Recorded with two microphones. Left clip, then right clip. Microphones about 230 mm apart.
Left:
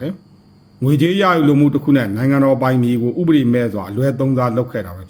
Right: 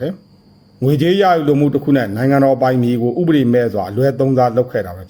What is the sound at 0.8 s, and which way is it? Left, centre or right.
A man's voice, centre.